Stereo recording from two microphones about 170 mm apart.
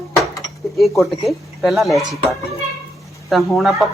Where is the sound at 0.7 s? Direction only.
Centre (ahead or behind).